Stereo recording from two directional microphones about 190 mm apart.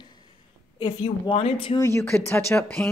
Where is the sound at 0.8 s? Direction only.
30° left (ahead or behind).